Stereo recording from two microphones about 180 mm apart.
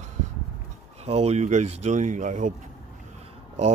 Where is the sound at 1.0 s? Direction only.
35° right (ahead or behind).